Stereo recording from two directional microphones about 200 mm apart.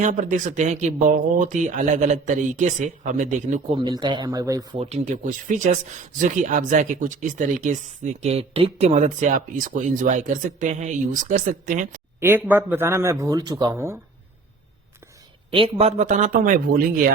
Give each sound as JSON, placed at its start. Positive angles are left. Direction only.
{"t": 0.0, "sound": "speech", "side_deg": -40}
{"t": 3.8, "sound": "speech", "side_deg": -25}
{"t": 4.8, "sound": "speech", "side_deg": -35}
{"t": 12.2, "sound": "a man's voice", "side_deg": -10}
{"t": 15.4, "sound": "speech", "side_deg": -25}